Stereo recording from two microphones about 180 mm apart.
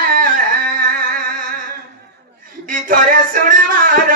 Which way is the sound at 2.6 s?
50° right (ahead or behind).